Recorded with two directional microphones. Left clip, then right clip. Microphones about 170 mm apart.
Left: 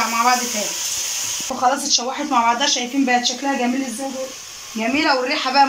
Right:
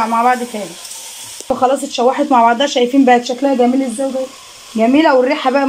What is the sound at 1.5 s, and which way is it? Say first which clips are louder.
Speech: right 4 dB; 50° right (ahead or behind).